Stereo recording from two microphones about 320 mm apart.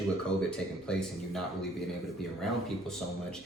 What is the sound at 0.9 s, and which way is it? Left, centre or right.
Speech, centre.